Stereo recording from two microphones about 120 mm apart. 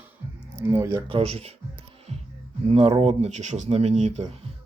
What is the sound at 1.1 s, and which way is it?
Speech, 60° right (ahead or behind).